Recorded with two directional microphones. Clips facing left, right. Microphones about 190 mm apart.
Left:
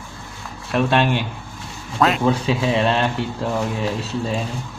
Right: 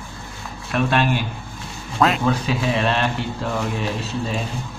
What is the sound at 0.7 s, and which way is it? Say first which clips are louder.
Speech: left 2 dB; 30° left (ahead or behind).